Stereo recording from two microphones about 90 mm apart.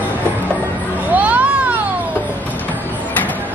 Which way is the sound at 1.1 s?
15° right (ahead or behind).